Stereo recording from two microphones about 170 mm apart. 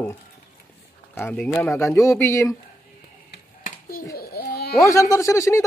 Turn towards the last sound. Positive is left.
turn(degrees=20)  # may be behind; listen again after turning